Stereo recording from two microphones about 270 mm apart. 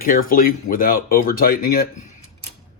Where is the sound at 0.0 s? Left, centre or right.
Left.